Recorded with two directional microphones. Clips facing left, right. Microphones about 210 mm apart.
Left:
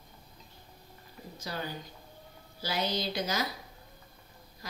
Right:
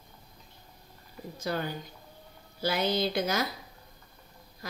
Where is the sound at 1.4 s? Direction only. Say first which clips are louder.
Right 6 dB; 55° right (ahead or behind).